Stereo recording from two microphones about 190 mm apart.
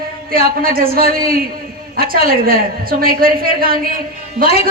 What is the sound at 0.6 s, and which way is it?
A woman's voice, 50° right (ahead or behind).